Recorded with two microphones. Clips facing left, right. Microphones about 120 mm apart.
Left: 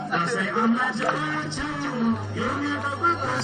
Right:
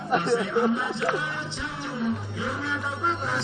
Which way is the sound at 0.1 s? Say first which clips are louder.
Right 4 dB; 35° right (ahead or behind).